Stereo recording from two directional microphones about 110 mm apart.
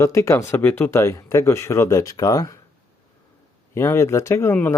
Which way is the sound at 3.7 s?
25° left (ahead or behind).